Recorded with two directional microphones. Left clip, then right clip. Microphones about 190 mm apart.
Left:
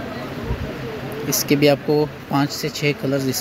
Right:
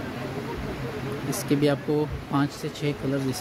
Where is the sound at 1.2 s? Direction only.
10° left (ahead or behind).